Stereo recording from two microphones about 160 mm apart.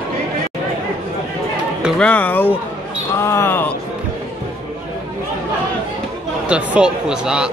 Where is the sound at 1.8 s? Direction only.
5° left (ahead or behind).